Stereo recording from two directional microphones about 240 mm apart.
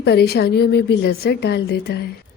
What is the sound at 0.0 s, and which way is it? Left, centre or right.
A woman's voice, left.